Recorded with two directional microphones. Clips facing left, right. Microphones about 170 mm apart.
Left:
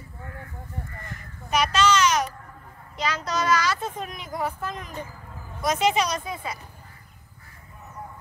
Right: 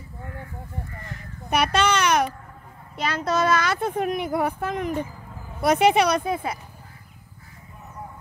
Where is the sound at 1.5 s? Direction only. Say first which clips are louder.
Right 1 dB; 60° right (ahead or behind).